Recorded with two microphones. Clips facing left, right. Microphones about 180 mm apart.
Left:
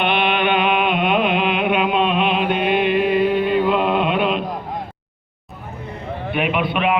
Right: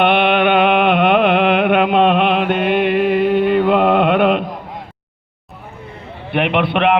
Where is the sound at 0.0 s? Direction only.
60° right (ahead or behind).